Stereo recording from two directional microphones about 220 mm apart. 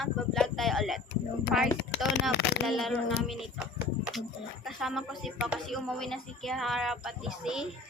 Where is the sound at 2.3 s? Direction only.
50° left (ahead or behind).